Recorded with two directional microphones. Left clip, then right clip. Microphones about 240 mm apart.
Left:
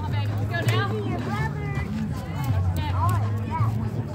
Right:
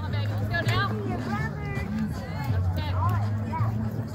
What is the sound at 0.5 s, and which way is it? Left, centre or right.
Music, right.